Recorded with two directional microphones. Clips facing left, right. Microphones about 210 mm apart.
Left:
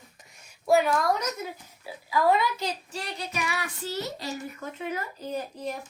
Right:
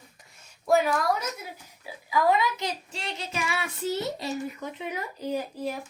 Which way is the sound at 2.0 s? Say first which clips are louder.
Even; 20° right (ahead or behind).